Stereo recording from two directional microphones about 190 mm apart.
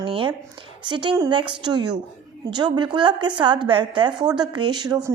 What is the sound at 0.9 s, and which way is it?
A woman's voice, 25° right (ahead or behind).